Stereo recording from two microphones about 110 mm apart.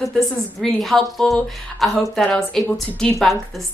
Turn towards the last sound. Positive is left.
turn(degrees=0)  # may be behind; listen again after turning